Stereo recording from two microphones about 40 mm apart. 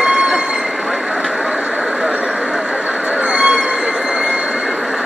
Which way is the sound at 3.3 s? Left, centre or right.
Right.